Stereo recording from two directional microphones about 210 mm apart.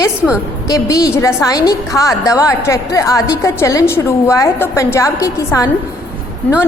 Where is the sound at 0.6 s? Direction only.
15° left (ahead or behind).